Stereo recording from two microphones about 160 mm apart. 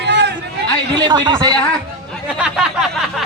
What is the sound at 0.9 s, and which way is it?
Speech, 25° right (ahead or behind).